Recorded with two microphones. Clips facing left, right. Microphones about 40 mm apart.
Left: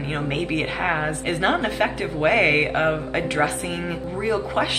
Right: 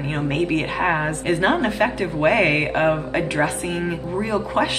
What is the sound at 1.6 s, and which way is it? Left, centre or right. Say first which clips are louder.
Speech: right 2 dB; centre.